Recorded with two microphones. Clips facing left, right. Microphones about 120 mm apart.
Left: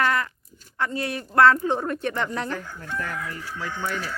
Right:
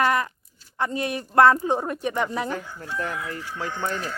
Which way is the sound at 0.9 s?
20° right (ahead or behind).